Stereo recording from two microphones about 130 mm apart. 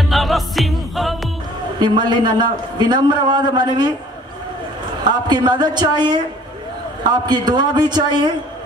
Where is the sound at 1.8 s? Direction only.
35° right (ahead or behind).